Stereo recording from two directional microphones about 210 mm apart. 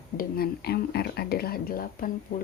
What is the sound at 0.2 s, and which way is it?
Speech, 45° left (ahead or behind).